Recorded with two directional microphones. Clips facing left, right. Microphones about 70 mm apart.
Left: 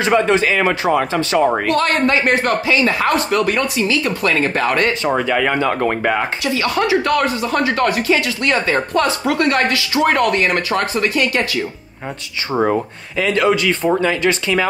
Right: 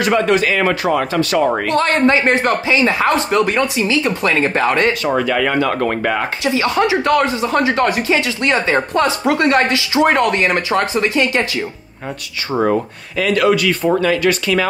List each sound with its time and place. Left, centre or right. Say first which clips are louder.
0.0 s speech: even; left
1.7 s speech: right 2 dB; right
5.0 s speech: even; left
6.4 s speech: right 5 dB; right
13.2 s speech: right 1 dB; left